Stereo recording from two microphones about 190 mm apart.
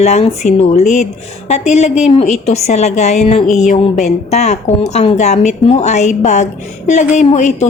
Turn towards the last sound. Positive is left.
turn(degrees=40)  # may be behind; listen again after turning